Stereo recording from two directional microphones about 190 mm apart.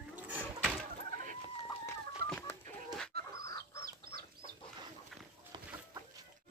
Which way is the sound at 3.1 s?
55° right (ahead or behind).